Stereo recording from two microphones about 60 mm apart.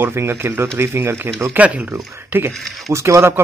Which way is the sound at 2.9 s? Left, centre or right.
Right.